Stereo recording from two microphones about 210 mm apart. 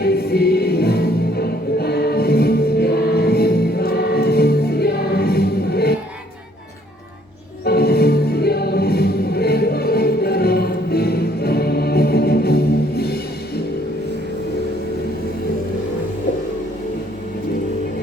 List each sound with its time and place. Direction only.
0.0 s music: 50° left (ahead or behind)
7.6 s music: 50° left (ahead or behind)